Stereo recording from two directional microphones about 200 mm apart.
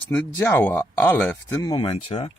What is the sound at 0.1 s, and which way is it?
Speech, 10° left (ahead or behind).